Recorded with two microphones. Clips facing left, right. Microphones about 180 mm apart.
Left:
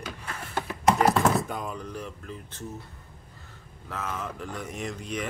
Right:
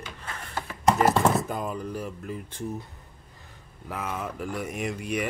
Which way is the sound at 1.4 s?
Centre (ahead or behind).